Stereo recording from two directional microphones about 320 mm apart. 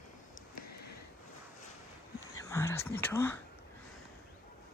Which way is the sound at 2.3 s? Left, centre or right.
Centre.